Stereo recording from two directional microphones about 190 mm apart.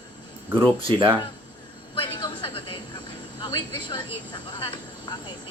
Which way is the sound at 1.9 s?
25° left (ahead or behind).